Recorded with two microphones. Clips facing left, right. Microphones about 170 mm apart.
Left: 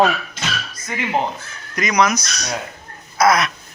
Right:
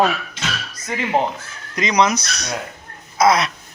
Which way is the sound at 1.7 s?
25° right (ahead or behind).